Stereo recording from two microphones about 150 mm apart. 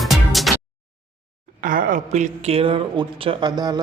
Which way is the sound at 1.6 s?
65° right (ahead or behind).